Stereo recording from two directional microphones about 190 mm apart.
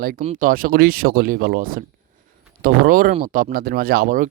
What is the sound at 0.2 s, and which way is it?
Speech, 40° right (ahead or behind).